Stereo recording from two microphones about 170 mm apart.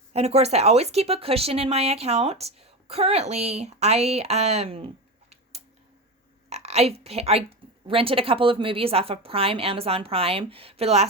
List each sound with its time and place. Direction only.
0.1 s speech: 40° right (ahead or behind)
5.3 s a sound: 40° right (ahead or behind)
6.5 s a woman's voice: 40° right (ahead or behind)